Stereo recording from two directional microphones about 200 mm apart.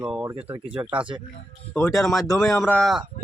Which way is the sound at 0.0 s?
5° right (ahead or behind).